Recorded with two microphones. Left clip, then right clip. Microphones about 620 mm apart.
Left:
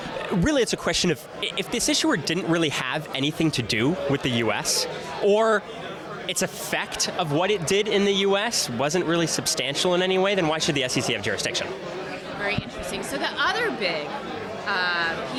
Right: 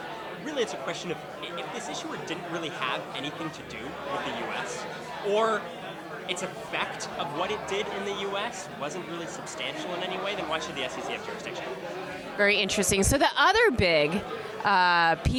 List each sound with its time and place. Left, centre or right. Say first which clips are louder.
0.4 s speech: left 7 dB; left
5.3 s speech: left 4 dB; left
12.5 s a woman's voice: right 4 dB; right